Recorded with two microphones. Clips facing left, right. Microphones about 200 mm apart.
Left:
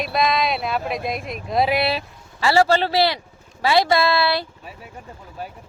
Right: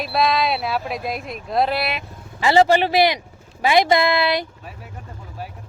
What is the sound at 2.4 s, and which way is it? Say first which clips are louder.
Speech: right 2 dB; 20° right (ahead or behind).